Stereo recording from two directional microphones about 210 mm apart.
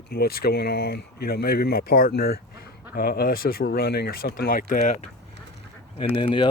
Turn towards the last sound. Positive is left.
turn(degrees=25)  # may be behind; listen again after turning